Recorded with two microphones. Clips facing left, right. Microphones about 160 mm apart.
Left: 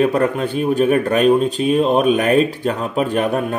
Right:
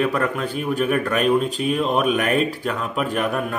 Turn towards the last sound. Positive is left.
turn(degrees=30)  # may be behind; listen again after turning